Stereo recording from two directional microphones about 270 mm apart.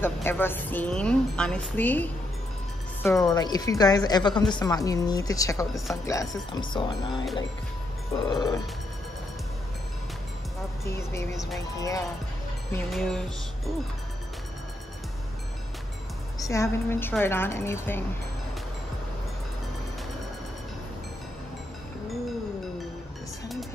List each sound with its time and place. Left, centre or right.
0.0 s a woman's voice: centre
11.0 s a woman's voice: centre
12.7 s music: centre
16.3 s a woman's voice: centre